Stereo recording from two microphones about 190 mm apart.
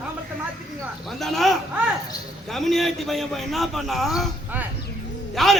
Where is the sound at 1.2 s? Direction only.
Centre (ahead or behind).